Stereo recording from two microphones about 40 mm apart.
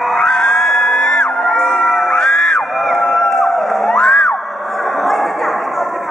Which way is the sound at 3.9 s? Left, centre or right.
Centre.